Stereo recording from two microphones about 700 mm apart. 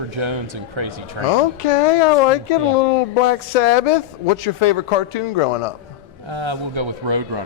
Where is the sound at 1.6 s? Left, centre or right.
Left.